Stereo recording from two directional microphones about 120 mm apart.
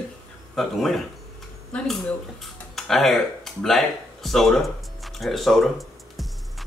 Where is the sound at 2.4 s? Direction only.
Centre (ahead or behind).